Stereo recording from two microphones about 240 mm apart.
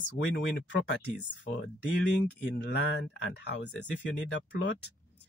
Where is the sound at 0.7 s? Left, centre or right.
Left.